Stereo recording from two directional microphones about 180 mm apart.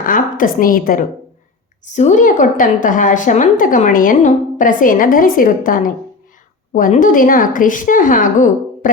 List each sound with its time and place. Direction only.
0.0 s a woman's voice: 50° left (ahead or behind)